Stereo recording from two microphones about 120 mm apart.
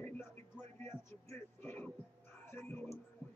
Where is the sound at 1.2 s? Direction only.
15° left (ahead or behind).